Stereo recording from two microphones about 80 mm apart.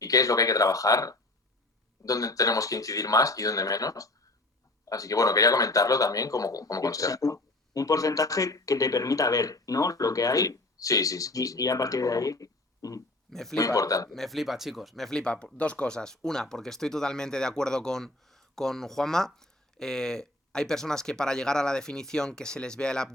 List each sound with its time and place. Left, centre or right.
0.0 s speech: left
13.3 s speech: centre
13.6 s speech: left
14.1 s speech: centre